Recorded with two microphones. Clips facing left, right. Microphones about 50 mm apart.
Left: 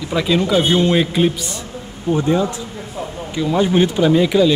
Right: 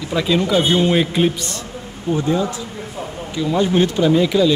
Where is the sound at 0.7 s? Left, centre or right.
Centre.